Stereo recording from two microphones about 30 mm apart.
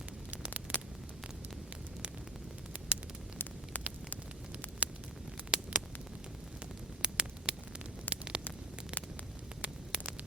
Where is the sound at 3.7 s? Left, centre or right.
Left.